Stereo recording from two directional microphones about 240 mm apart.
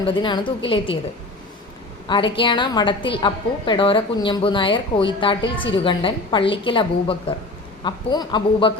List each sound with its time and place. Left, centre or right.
0.0 s a woman's voice: left
2.0 s a woman's voice: left